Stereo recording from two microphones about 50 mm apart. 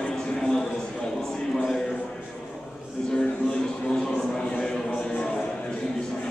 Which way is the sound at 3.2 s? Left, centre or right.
Centre.